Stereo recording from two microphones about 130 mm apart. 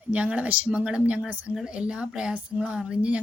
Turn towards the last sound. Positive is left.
turn(degrees=-10)  # may be behind; listen again after turning